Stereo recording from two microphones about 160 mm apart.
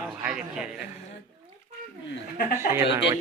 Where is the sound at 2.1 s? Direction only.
65° left (ahead or behind).